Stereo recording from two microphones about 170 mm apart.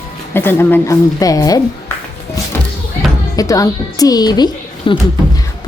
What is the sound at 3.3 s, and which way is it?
A woman's voice, 20° left (ahead or behind).